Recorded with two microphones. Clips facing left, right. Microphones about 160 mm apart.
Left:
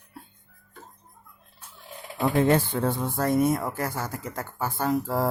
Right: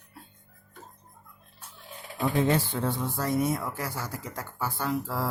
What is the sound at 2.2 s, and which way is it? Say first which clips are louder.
Speech: left 4 dB; 55° left (ahead or behind).